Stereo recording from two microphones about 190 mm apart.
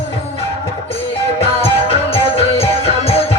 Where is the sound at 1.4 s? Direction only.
30° left (ahead or behind).